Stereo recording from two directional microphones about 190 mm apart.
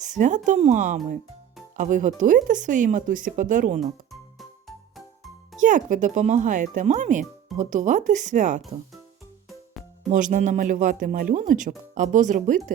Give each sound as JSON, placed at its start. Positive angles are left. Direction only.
{"t": 0.0, "sound": "speech", "side_deg": -40}
{"t": 3.8, "sound": "music", "side_deg": 0}
{"t": 5.5, "sound": "speech", "side_deg": -40}
{"t": 9.5, "sound": "music", "side_deg": 0}
{"t": 10.1, "sound": "speech", "side_deg": -40}